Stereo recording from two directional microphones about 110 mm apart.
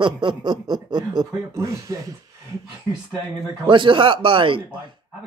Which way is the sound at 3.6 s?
45° right (ahead or behind).